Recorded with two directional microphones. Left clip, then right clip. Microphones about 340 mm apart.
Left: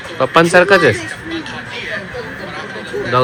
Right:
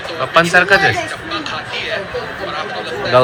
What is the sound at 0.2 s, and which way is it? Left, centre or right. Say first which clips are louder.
Mantra: left 2 dB; centre.